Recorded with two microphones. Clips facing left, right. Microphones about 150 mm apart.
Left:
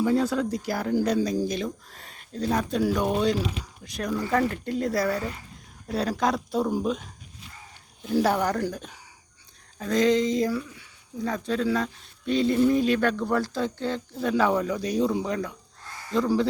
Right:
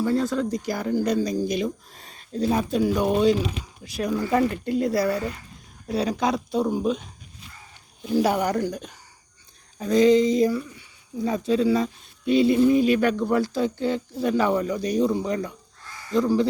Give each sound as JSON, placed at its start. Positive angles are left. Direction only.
{"t": 0.1, "sound": "speech", "side_deg": 10}
{"t": 1.9, "sound": "a sound", "side_deg": -25}
{"t": 2.4, "sound": "speech", "side_deg": -10}
{"t": 8.0, "sound": "speech", "side_deg": -5}
{"t": 11.3, "sound": "speech", "side_deg": -15}